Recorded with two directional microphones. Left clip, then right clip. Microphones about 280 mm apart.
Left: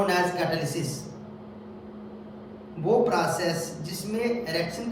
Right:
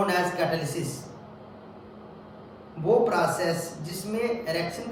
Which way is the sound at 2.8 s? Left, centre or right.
Centre.